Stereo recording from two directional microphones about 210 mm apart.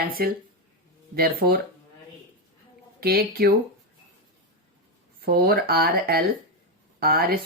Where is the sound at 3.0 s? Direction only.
45° right (ahead or behind).